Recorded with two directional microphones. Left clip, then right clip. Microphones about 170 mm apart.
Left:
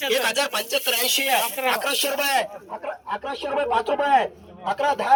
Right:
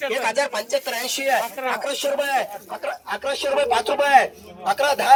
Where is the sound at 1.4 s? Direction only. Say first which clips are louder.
Left 2 dB; 20° right (ahead or behind).